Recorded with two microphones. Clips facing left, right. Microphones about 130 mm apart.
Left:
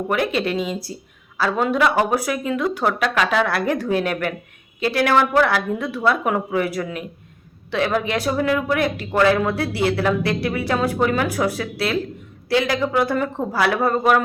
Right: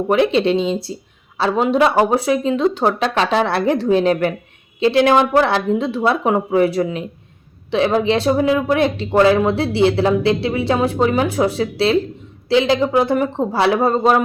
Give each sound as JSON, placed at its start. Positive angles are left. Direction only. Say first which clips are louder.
{"t": 0.1, "sound": "speech", "louder": "right 7 dB", "side_deg": -25}